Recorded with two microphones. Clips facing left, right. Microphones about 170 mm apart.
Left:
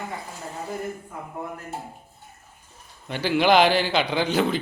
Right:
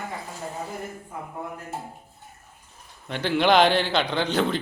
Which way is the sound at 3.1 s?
5° left (ahead or behind).